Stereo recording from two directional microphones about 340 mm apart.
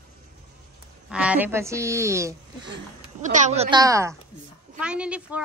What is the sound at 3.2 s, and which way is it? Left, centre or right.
A woman's voice, right.